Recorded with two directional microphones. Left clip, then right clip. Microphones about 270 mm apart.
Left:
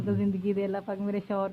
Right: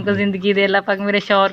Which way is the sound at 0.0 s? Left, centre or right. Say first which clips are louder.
Right 12 dB; centre.